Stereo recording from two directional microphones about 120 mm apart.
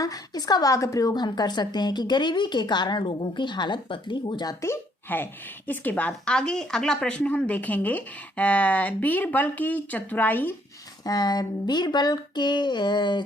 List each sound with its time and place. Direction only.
0.0 s a woman's voice: 30° left (ahead or behind)
4.6 s speech: 20° left (ahead or behind)
11.0 s a woman's voice: 35° left (ahead or behind)